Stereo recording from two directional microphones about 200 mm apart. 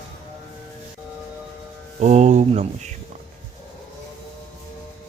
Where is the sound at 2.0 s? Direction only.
35° right (ahead or behind).